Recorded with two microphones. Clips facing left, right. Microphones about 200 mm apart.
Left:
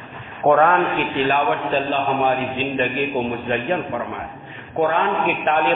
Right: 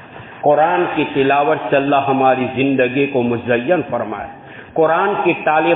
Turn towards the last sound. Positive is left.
turn(degrees=-40)  # may be behind; listen again after turning